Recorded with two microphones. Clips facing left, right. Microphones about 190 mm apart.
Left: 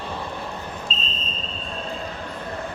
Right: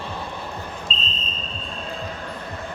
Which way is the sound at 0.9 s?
45° left (ahead or behind).